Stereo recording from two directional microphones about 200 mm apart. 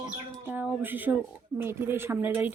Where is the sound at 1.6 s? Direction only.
10° right (ahead or behind).